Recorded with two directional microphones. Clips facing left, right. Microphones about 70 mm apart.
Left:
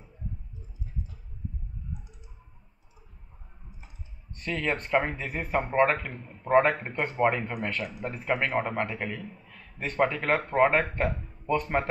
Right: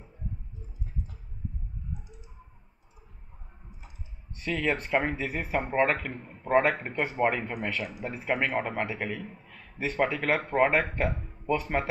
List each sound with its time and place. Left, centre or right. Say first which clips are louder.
4.4 s speech: right 1 dB; centre
6.1 s a man's voice: even; right
6.4 s speech: left 2 dB; centre
9.5 s a sound: right 3 dB; centre
9.9 s speech: left 2 dB; centre